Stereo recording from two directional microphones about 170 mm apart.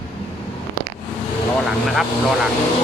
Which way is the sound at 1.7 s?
Centre (ahead or behind).